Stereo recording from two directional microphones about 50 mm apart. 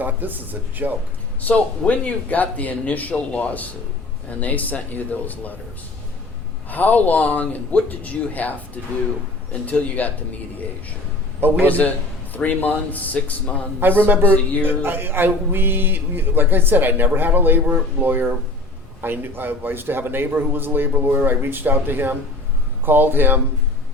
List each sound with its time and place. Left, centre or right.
0.0 s speech: right
1.4 s speech: left
6.7 s a man's voice: left
11.3 s a man's voice: right
11.7 s speech: left
13.7 s speech: right